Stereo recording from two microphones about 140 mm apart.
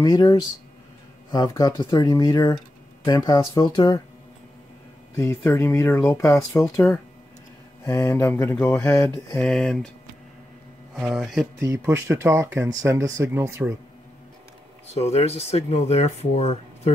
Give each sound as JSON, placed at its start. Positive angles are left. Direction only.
{"t": 0.0, "sound": "speech", "side_deg": 30}
{"t": 5.1, "sound": "speech", "side_deg": 20}
{"t": 9.4, "sound": "speech", "side_deg": 5}
{"t": 11.0, "sound": "speech", "side_deg": 0}
{"t": 11.6, "sound": "speech", "side_deg": -20}
{"t": 14.9, "sound": "speech", "side_deg": 50}